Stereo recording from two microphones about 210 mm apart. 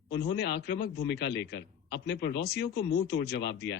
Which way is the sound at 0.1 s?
55° left (ahead or behind).